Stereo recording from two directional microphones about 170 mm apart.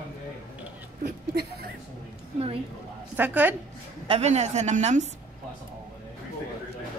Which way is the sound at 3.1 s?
10° right (ahead or behind).